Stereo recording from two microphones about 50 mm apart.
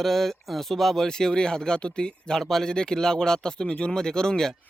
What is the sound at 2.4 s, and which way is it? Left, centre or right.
Speech, centre.